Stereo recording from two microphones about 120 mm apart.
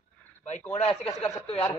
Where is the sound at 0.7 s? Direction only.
55° left (ahead or behind).